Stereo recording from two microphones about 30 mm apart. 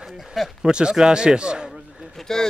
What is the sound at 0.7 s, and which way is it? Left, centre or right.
A man's voice, right.